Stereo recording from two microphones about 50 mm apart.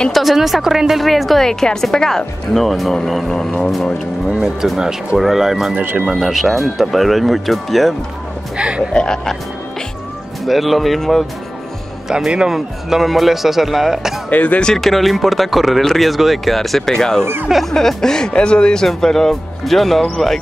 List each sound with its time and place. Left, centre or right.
0.1 s a woman's voice: centre
4.3 s speech: centre
5.8 s speech: right
6.0 s a woman's voice: centre
8.5 s speech: right
8.9 s speech: centre
10.4 s a woman's voice: centre
12.4 s a woman's voice: centre
14.3 s speech: left
14.8 s a woman's voice: centre
17.5 s a woman's voice: centre
17.7 s a woman's voice: centre